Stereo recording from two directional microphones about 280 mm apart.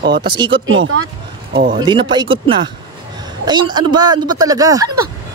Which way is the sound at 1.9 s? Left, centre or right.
Centre.